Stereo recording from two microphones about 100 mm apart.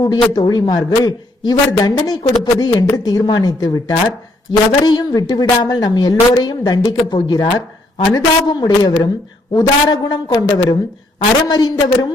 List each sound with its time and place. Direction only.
0.0 s a man's voice: 40° left (ahead or behind)